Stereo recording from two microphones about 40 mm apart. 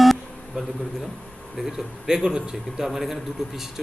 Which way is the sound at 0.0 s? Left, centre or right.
Centre.